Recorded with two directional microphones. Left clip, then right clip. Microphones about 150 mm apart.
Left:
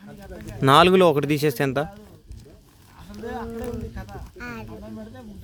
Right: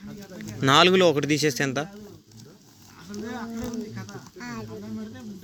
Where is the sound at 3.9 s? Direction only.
5° left (ahead or behind).